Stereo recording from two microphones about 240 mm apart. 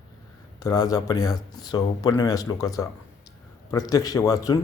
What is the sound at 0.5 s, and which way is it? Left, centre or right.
Speech, centre.